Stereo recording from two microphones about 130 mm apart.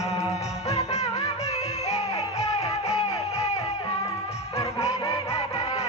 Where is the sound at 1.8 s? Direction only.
55° left (ahead or behind).